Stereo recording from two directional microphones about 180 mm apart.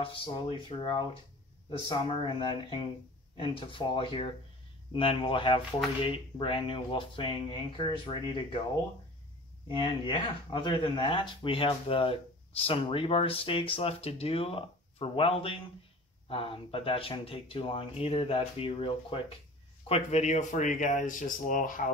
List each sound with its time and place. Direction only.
0.0 s speech: 30° left (ahead or behind)
9.7 s speech: 30° left (ahead or behind); by 21.9 s 45° left (ahead or behind)